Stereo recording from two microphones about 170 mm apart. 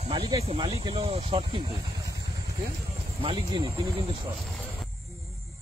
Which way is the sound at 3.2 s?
30° right (ahead or behind).